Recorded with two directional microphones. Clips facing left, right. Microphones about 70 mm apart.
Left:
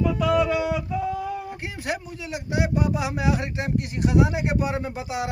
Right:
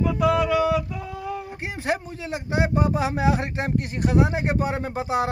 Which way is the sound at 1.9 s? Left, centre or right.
Right.